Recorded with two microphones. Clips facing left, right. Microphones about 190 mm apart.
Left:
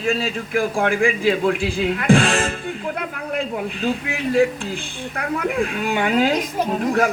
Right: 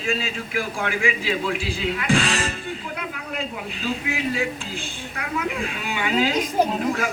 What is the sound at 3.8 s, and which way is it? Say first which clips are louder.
A man's voice: left 1 dB; 55° left (ahead or behind).